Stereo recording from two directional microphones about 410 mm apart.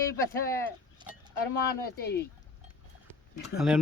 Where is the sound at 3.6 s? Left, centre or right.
Centre.